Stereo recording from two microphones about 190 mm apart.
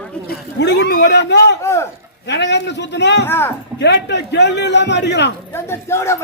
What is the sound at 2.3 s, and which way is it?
Speech, 65° left (ahead or behind).